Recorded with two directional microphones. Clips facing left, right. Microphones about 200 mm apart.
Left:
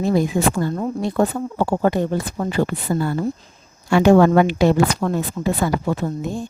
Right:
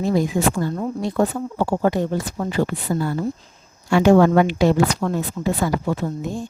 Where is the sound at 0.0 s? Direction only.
60° left (ahead or behind).